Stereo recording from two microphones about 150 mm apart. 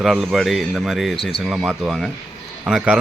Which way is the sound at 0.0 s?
Centre (ahead or behind).